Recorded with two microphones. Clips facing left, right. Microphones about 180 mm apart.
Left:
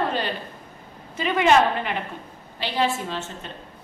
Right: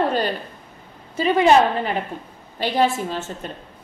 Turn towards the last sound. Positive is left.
turn(degrees=-45)  # may be behind; listen again after turning